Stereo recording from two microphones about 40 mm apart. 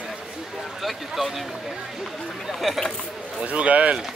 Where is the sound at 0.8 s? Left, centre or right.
Centre.